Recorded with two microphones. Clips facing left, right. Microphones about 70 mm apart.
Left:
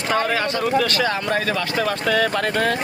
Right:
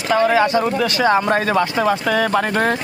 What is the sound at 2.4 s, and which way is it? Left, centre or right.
Speech, right.